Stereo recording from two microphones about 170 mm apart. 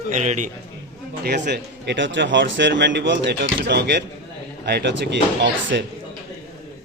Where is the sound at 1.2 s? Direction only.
75° right (ahead or behind).